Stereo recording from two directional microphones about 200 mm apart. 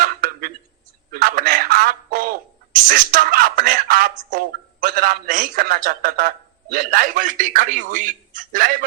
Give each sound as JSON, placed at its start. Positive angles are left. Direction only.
{"t": 0.0, "sound": "a sound", "side_deg": -45}
{"t": 1.1, "sound": "telephone", "side_deg": -45}
{"t": 2.8, "sound": "speech", "side_deg": -45}